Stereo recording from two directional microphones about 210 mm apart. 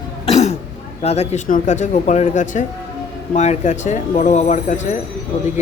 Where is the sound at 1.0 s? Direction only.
30° left (ahead or behind).